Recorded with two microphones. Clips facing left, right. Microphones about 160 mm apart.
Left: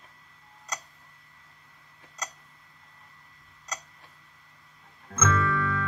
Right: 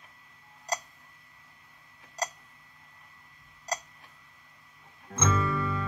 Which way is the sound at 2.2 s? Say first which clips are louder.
Right 6 dB; 35° right (ahead or behind).